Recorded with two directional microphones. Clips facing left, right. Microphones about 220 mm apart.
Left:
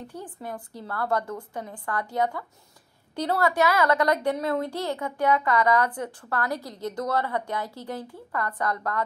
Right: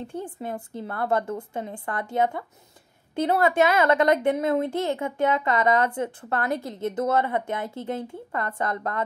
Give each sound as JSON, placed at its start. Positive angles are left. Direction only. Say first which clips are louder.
{"t": 0.0, "sound": "a woman's voice", "louder": "right 5 dB", "side_deg": -25}